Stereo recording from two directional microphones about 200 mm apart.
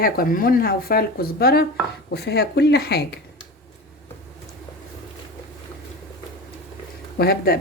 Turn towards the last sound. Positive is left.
turn(degrees=50)  # may be behind; listen again after turning